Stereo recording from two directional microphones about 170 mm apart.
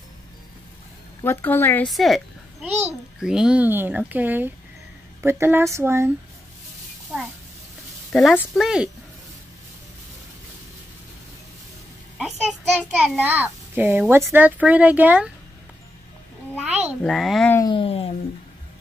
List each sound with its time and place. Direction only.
1.2 s speech: 15° left (ahead or behind)
1.9 s a child's voice: centre (ahead or behind); by 6.1 s 15° right (ahead or behind)
8.1 s a child's voice: centre (ahead or behind)
12.2 s child singing: centre (ahead or behind)
13.2 s a child's voice: 10° right (ahead or behind)
17.0 s a child's voice: centre (ahead or behind)
17.6 s a sound: 30° left (ahead or behind)